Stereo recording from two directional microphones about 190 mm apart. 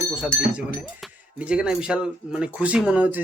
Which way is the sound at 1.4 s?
5° right (ahead or behind).